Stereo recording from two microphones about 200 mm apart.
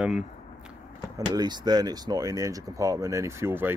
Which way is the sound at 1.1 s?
20° right (ahead or behind).